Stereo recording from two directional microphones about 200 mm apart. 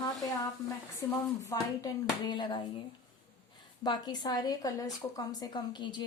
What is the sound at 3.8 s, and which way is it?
Speech, 20° left (ahead or behind).